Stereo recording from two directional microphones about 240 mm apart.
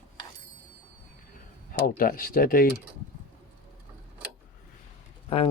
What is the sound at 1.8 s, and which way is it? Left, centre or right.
Speech, left.